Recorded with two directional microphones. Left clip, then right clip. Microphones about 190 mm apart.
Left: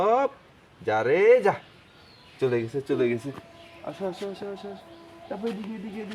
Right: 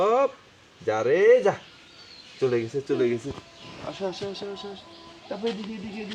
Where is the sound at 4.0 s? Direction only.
20° left (ahead or behind).